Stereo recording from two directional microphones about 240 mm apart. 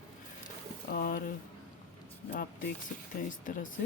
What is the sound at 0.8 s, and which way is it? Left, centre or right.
Speech, left.